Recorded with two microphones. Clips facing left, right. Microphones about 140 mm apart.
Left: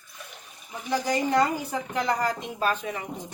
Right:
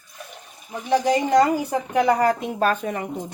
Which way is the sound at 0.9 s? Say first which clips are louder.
Right 6 dB; 65° right (ahead or behind).